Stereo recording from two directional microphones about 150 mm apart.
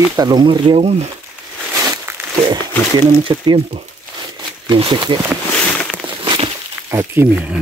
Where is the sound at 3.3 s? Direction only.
30° right (ahead or behind).